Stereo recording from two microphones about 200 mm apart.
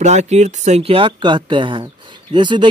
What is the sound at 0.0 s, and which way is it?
Speech, 35° right (ahead or behind).